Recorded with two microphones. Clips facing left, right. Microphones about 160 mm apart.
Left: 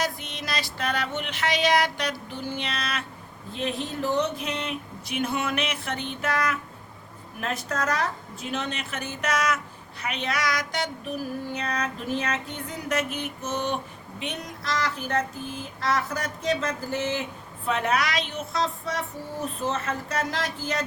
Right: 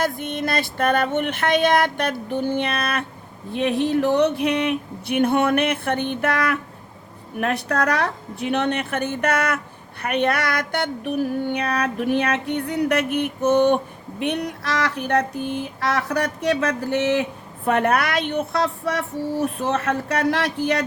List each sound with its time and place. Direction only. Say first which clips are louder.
0.0 s music: right 7 dB; 55° right (ahead or behind)
14.2 s speech: right 10 dB; 65° right (ahead or behind)
17.7 s music: right 6 dB; 55° right (ahead or behind)